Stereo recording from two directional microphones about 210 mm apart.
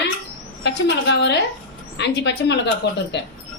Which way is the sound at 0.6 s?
55° left (ahead or behind).